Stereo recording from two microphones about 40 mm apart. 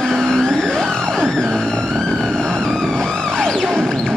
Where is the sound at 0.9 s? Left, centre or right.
Centre.